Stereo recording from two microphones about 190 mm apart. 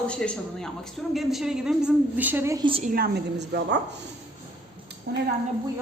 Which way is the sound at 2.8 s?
50° right (ahead or behind).